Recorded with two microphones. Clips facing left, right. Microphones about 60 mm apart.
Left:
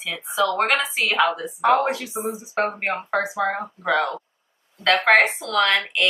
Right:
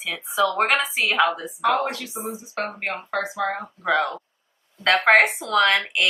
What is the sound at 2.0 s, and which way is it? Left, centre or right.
Speech, centre.